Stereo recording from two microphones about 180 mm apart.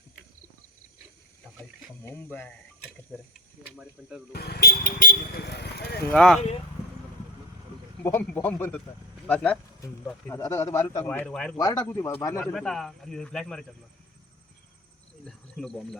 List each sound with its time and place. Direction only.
2.0 s a man's voice: 10° left (ahead or behind)
4.3 s speech: 60° left (ahead or behind)
6.1 s speech: 5° left (ahead or behind)
8.0 s a man's voice: 10° left (ahead or behind)
10.3 s a man's voice: 15° left (ahead or behind)
11.5 s speech: 20° left (ahead or behind); by 13.7 s 5° left (ahead or behind)
15.2 s speech: 5° left (ahead or behind)